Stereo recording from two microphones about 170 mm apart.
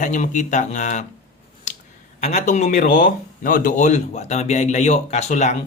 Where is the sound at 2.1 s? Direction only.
45° left (ahead or behind).